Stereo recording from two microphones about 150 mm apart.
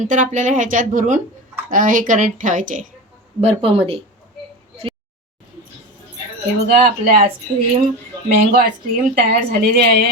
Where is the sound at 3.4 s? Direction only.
40° right (ahead or behind).